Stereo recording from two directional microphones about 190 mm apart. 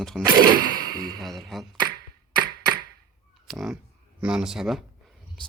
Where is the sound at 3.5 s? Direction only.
Centre (ahead or behind).